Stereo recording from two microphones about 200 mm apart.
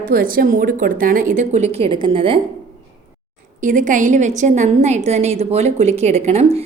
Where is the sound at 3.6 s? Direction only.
40° right (ahead or behind).